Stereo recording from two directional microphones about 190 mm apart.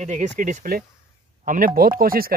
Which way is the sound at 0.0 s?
40° right (ahead or behind).